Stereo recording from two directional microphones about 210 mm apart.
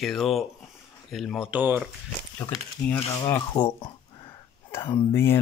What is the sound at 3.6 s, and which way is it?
Speech, 30° left (ahead or behind).